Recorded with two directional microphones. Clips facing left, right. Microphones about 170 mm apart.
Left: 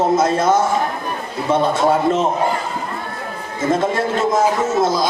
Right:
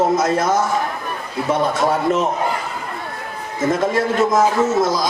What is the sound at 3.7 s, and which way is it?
Speech, 25° left (ahead or behind).